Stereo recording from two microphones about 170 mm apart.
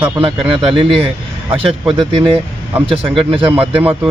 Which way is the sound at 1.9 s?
30° right (ahead or behind).